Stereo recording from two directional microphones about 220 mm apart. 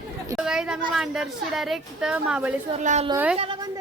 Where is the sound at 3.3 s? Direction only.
20° right (ahead or behind).